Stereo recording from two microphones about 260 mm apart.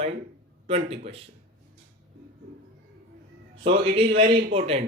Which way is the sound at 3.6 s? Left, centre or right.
Right.